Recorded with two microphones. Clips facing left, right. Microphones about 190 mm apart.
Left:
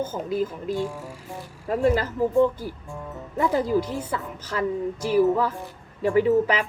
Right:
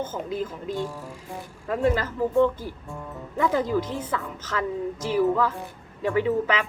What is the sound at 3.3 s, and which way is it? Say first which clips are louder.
Speech: left 1 dB; 35° left (ahead or behind).